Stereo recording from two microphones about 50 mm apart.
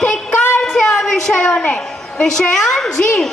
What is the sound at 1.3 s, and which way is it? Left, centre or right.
Speech, centre.